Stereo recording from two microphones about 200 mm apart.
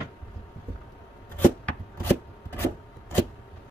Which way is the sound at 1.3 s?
10° left (ahead or behind).